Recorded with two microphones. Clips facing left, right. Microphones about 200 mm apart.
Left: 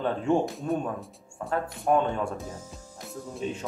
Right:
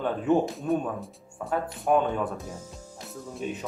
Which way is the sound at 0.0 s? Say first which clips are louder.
Right 1 dB; 5° right (ahead or behind).